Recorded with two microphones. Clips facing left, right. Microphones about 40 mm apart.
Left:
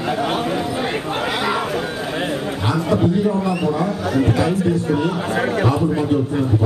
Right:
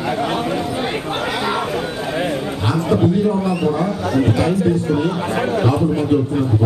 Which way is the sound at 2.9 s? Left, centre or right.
Right.